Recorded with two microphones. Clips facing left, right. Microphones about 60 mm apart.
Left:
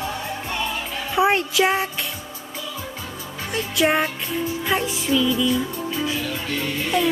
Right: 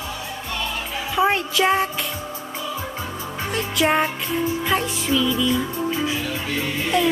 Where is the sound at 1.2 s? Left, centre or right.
Centre.